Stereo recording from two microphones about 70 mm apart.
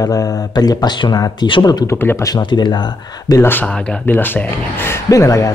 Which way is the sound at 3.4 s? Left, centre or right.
Left.